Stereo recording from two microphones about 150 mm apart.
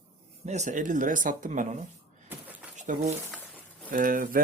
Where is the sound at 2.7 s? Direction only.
55° right (ahead or behind).